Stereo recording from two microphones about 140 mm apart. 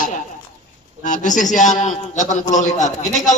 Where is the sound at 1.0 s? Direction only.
65° left (ahead or behind).